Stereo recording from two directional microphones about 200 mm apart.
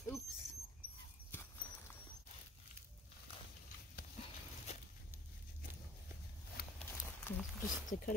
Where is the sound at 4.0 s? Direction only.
50° left (ahead or behind).